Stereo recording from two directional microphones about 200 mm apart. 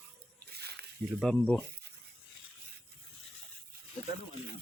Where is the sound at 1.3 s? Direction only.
5° left (ahead or behind).